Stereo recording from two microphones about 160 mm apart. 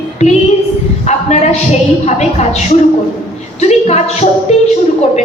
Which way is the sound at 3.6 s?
40° left (ahead or behind).